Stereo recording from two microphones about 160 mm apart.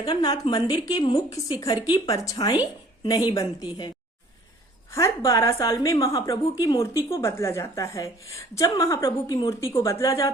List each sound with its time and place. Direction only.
0.0 s a woman's voice: 25° left (ahead or behind)
4.9 s a woman's voice: 20° left (ahead or behind)